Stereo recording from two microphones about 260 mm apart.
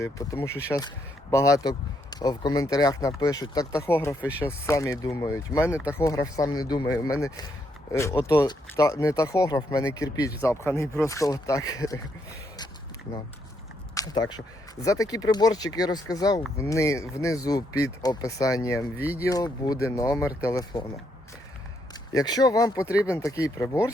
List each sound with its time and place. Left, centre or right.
0.0 s speech: centre
5.7 s speech: centre
6.0 s speech: centre
13.9 s speech: centre
18.9 s speech: centre
19.2 s speech: centre
22.1 s speech: centre